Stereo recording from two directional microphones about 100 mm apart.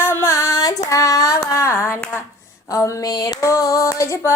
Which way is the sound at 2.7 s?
35° left (ahead or behind).